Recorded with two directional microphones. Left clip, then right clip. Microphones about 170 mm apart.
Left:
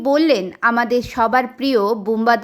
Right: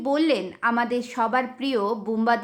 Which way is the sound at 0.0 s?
30° left (ahead or behind).